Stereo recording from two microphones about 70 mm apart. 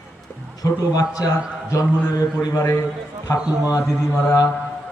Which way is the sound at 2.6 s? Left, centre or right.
Left.